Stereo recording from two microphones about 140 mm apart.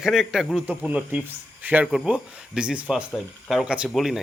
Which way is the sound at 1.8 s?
Centre (ahead or behind).